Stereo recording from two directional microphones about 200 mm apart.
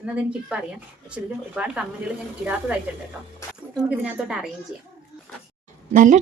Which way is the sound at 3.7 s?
5° right (ahead or behind).